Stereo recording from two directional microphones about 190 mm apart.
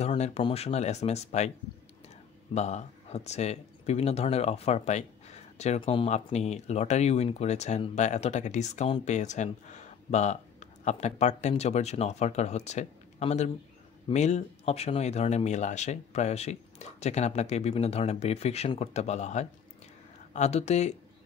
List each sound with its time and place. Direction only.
0.0 s speech: 35° left (ahead or behind)
2.5 s speech: 35° left (ahead or behind)